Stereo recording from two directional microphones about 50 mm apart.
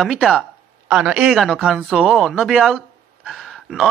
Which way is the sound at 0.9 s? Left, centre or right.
Centre.